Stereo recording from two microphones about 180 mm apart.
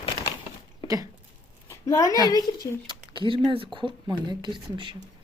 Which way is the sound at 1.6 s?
15° left (ahead or behind).